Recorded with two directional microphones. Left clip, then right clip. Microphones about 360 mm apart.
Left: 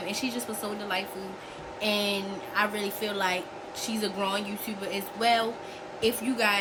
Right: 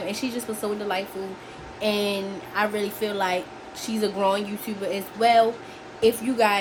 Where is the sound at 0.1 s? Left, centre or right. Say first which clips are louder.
Right 3 dB; centre.